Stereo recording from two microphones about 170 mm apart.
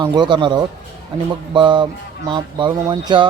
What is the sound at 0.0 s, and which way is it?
Speech, 25° right (ahead or behind).